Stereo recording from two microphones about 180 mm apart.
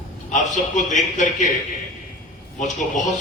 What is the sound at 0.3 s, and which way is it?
A man's voice, 45° left (ahead or behind).